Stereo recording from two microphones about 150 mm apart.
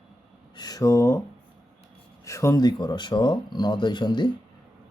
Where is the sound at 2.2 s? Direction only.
20° left (ahead or behind).